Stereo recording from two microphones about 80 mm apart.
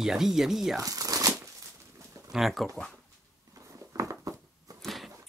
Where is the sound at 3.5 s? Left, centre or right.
Right.